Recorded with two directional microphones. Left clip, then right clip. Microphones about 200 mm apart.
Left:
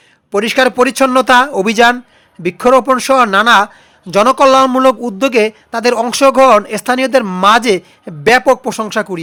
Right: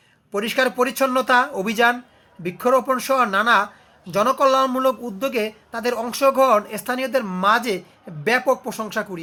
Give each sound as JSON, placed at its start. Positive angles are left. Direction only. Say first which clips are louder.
{"t": 0.3, "sound": "a woman's voice", "louder": "left 9 dB", "side_deg": 50}